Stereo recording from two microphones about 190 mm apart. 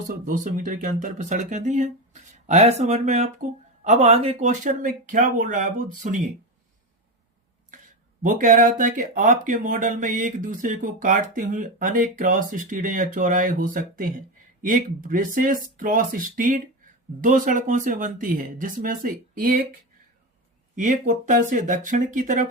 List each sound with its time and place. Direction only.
0.1 s speech: 45° right (ahead or behind)
8.2 s speech: 45° right (ahead or behind)
20.7 s speech: 40° right (ahead or behind)